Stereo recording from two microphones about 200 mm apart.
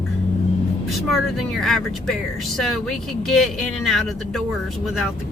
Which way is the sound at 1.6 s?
Centre (ahead or behind).